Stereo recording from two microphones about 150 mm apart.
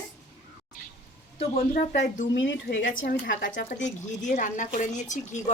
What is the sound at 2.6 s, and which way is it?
A woman's voice, 75° left (ahead or behind).